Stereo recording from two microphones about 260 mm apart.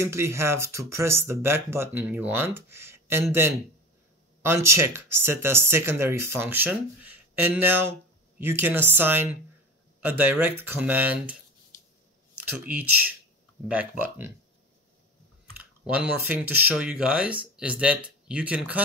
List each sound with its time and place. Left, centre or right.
0.0 s speech: centre
12.4 s speech: centre
15.5 s speech: centre